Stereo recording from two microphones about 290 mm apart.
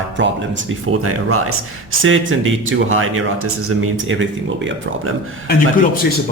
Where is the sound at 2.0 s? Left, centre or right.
Right.